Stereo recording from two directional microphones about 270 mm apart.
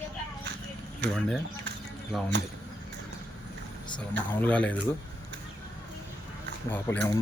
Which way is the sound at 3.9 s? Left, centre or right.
Centre.